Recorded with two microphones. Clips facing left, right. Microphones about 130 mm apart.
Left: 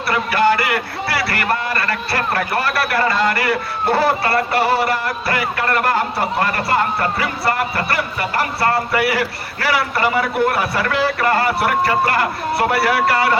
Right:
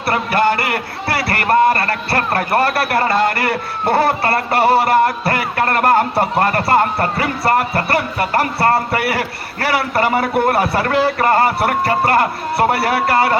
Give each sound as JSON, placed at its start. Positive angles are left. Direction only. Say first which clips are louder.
{"t": 0.1, "sound": "a man's voice", "louder": "even", "side_deg": -50}
{"t": 8.9, "sound": "a man's voice", "louder": "left 1 dB", "side_deg": -55}